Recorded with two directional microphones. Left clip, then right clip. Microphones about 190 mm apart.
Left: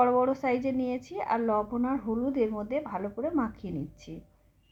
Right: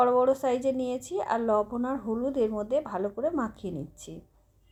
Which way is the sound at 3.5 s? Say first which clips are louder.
Right 1 dB; 45° right (ahead or behind).